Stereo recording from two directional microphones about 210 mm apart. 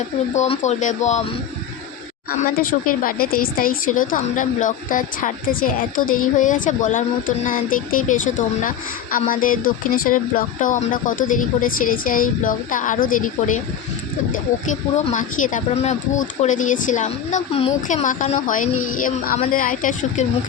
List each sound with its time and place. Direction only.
0.3 s speech: 30° left (ahead or behind)
2.6 s speech: 40° left (ahead or behind)
14.7 s speech: 35° left (ahead or behind)